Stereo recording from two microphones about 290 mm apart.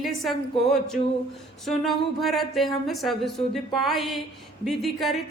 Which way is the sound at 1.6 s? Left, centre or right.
Centre.